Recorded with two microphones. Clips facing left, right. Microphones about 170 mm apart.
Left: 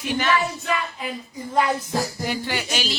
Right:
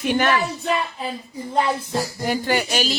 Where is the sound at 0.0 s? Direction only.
55° right (ahead or behind).